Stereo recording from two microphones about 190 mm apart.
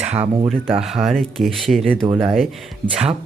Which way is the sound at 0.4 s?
5° left (ahead or behind).